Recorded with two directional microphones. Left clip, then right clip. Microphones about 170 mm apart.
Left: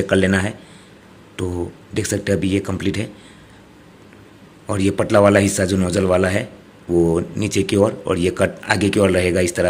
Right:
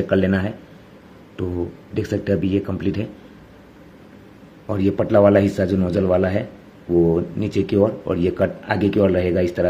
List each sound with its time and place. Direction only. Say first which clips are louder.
0.0 s speech: left 2 dB; 10° left (ahead or behind)
1.4 s speech: left 1 dB; 25° left (ahead or behind)
2.0 s speech: left 1 dB; 10° left (ahead or behind)
4.6 s speech: left 1 dB; 10° left (ahead or behind)
6.9 s speech: even; 25° left (ahead or behind)
7.2 s speech: left 1 dB; 10° left (ahead or behind)